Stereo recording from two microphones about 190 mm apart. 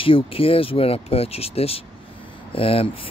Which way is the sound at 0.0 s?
30° left (ahead or behind).